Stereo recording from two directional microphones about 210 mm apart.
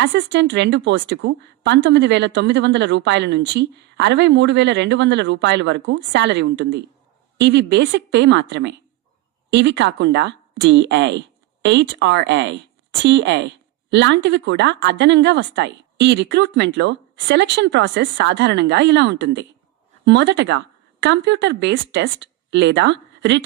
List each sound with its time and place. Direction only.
0.0 s a woman's voice: 60° right (ahead or behind)